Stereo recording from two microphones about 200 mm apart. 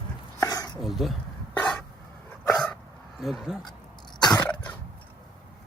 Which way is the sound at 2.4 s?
5° left (ahead or behind).